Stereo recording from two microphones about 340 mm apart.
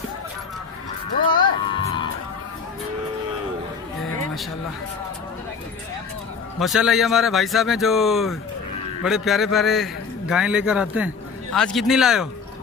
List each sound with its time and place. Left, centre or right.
1.4 s music: centre
6.6 s a man's voice: centre